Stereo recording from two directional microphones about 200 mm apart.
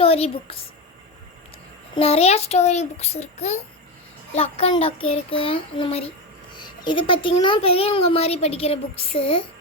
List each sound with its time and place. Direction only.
0.0 s a woman's voice: 30° left (ahead or behind)
2.0 s a child's voice: 30° left (ahead or behind)